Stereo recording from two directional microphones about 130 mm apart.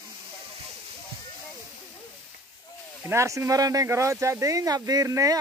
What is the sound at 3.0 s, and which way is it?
Speech, 25° right (ahead or behind).